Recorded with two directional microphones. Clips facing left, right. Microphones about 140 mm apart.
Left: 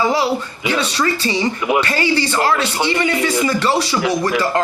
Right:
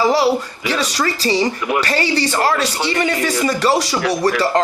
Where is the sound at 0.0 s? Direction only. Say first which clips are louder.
Right 2 dB; 30° right (ahead or behind).